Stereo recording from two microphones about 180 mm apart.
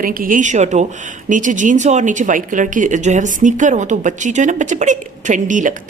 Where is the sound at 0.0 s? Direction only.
50° right (ahead or behind).